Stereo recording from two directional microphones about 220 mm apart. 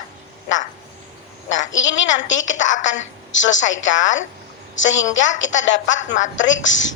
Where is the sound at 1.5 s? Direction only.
60° left (ahead or behind).